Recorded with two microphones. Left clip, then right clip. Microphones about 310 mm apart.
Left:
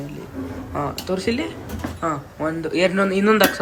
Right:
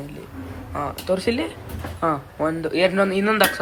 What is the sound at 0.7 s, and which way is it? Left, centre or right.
Speech, centre.